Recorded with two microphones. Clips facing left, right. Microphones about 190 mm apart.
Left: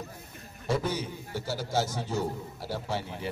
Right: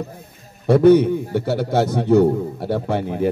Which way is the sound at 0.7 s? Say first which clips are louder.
Right 18 dB; 60° right (ahead or behind).